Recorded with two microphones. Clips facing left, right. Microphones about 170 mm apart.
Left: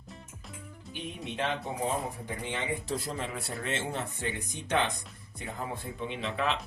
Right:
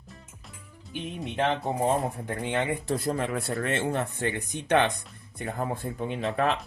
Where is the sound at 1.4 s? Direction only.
50° right (ahead or behind).